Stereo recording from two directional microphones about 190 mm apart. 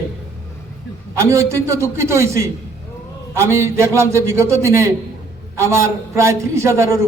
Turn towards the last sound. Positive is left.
turn(degrees=-15)  # may be behind; listen again after turning